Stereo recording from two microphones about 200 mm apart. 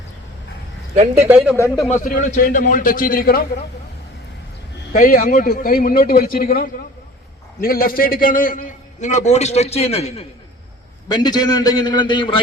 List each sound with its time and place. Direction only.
1.5 s speech: 15° left (ahead or behind)
1.9 s a man's voice: 40° left (ahead or behind)
4.9 s a man's voice: 45° left (ahead or behind); by 10.2 s 30° left (ahead or behind)
11.1 s a man's voice: 20° left (ahead or behind)